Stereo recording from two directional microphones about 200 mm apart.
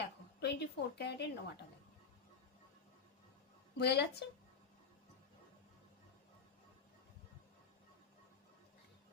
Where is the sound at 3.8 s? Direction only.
55° left (ahead or behind).